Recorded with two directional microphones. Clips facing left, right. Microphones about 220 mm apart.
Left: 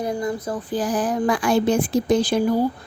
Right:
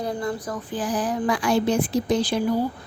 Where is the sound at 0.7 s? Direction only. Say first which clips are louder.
Left 3 dB; 45° left (ahead or behind).